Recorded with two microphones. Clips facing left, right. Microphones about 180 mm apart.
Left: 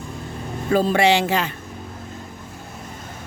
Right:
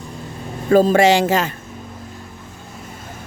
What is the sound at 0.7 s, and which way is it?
Speech, 45° right (ahead or behind).